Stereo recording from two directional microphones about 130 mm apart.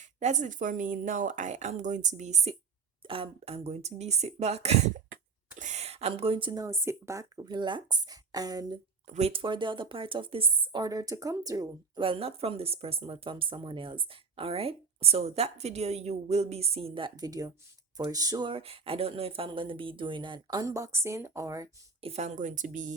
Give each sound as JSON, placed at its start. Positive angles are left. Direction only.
{"t": 0.0, "sound": "speech", "side_deg": -65}
{"t": 3.0, "sound": "speech", "side_deg": -45}
{"t": 5.5, "sound": "a sound", "side_deg": -65}
{"t": 6.5, "sound": "speech", "side_deg": -30}
{"t": 9.0, "sound": "a woman's voice", "side_deg": -55}
{"t": 20.7, "sound": "speech", "side_deg": -25}
{"t": 22.0, "sound": "speech", "side_deg": -55}